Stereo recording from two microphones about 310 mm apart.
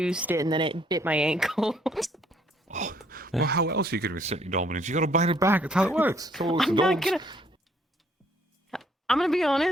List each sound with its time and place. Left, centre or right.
0.0 s speech: centre
2.6 s a sound: right
3.4 s speech: right
5.4 s speech: centre
7.2 s speech: centre
8.7 s speech: centre